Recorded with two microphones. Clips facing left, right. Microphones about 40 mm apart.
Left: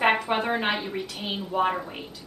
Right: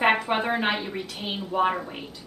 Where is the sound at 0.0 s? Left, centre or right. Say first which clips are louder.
Right 1 dB; centre.